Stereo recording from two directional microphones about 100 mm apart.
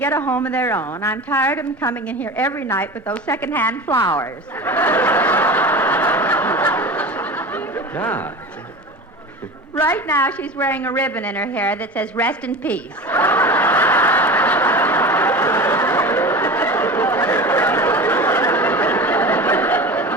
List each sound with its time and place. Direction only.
0.0 s a woman's voice: 20° left (ahead or behind)
3.9 s snicker: 30° left (ahead or behind)
9.7 s a woman's voice: 20° left (ahead or behind)
12.5 s snicker: 15° left (ahead or behind)